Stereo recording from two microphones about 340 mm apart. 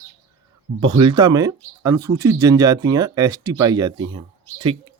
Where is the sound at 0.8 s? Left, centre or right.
Centre.